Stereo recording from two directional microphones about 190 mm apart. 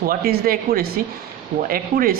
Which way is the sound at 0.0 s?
50° right (ahead or behind).